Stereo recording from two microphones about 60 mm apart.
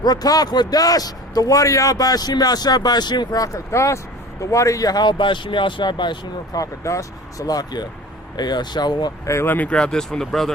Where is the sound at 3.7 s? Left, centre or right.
Left.